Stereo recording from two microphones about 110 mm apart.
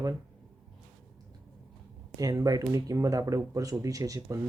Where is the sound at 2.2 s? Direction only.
35° right (ahead or behind).